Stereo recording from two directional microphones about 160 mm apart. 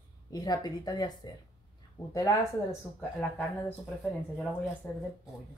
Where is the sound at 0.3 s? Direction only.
25° left (ahead or behind).